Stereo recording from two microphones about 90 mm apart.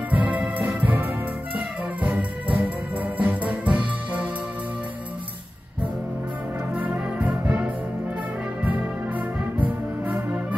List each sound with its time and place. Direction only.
0.1 s music: 15° right (ahead or behind)
6.7 s brass instrument: 15° right (ahead or behind)